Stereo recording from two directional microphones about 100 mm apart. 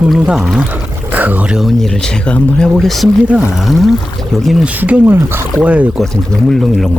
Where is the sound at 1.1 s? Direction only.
15° right (ahead or behind).